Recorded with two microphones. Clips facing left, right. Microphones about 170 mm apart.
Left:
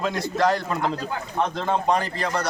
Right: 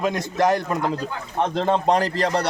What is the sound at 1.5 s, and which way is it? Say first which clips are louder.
Speech: right 5 dB; 35° right (ahead or behind).